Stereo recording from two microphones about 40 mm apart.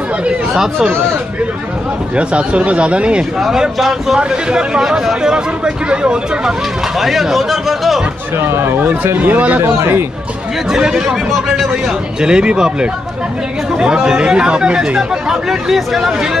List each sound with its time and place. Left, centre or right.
0.6 s speech: centre
2.1 s speech: right
3.3 s speech: centre
4.2 s speech: right
7.0 s speech: centre
8.4 s speech: right
8.7 s speech: right
9.6 s speech: right
10.7 s speech: centre
13.9 s speech: centre